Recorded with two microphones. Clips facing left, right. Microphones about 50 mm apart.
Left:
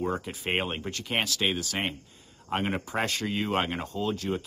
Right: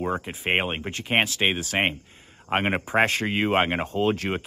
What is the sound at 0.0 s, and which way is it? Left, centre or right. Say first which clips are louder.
Speech: right 3 dB; right.